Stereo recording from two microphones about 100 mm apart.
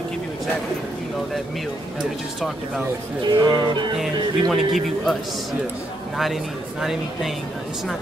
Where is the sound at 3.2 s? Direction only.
50° right (ahead or behind).